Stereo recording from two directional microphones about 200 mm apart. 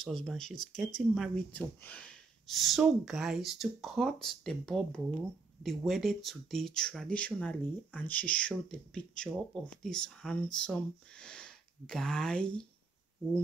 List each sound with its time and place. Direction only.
0.0 s speech: centre (ahead or behind)
0.6 s speech: 40° left (ahead or behind)
1.1 s speech: centre (ahead or behind)